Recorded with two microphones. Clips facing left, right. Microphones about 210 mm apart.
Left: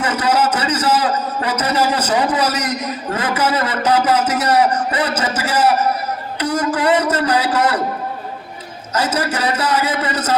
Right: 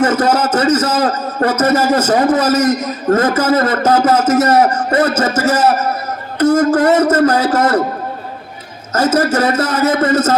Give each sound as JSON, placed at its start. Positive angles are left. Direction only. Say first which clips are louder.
{"t": 0.0, "sound": "a man's voice", "louder": "right 4 dB", "side_deg": -45}
{"t": 9.1, "sound": "speech", "louder": "right 7 dB", "side_deg": -45}